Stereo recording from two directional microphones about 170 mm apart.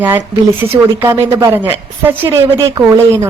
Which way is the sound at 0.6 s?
15° right (ahead or behind).